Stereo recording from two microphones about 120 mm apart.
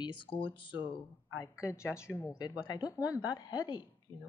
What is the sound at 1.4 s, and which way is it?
Speech, 25° left (ahead or behind).